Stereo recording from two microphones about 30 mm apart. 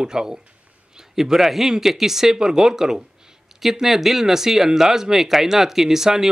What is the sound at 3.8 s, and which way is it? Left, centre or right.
Speech, centre.